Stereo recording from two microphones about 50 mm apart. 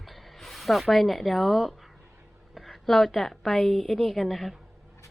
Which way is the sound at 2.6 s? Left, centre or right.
Centre.